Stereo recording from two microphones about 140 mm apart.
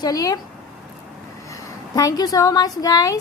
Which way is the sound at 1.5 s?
25° left (ahead or behind).